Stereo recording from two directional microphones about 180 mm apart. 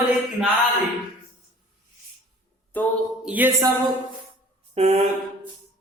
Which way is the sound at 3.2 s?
10° right (ahead or behind).